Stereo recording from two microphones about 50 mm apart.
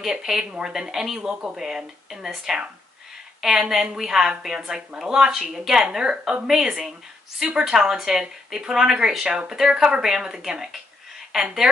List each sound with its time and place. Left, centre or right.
0.0 s a woman's voice: centre
1.3 s speech: right
1.6 s a woman's voice: centre